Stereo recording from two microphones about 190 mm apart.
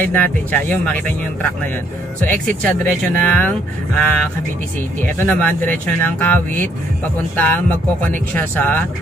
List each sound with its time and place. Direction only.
0.0 s speech: 10° left (ahead or behind)
2.4 s speech: 5° left (ahead or behind)